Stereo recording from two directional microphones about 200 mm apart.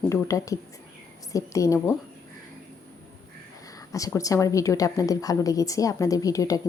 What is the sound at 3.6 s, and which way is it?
A woman's voice, 15° left (ahead or behind).